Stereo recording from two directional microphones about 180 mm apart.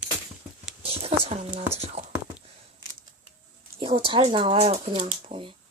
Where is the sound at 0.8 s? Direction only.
35° right (ahead or behind).